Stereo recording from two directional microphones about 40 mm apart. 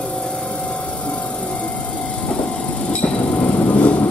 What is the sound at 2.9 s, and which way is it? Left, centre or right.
Train, left.